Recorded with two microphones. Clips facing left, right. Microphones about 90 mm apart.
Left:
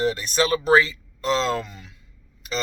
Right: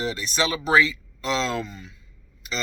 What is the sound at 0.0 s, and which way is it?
Speech, 45° left (ahead or behind).